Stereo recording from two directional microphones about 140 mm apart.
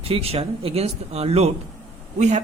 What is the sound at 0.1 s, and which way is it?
Speech, 45° right (ahead or behind).